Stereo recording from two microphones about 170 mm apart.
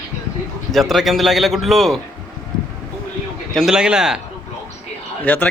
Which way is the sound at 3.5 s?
Centre (ahead or behind).